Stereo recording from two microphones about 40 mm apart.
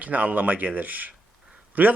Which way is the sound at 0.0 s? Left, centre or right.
Right.